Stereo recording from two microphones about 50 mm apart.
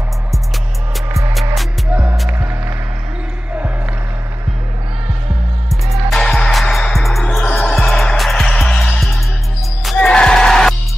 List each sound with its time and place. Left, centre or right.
2.2 s music: right
6.1 s music: centre
6.9 s music: centre